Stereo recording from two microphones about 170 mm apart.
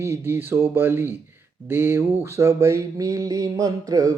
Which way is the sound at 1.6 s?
15° right (ahead or behind).